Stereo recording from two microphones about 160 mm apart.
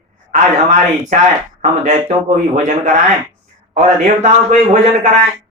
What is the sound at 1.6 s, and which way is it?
A man's voice, 45° right (ahead or behind).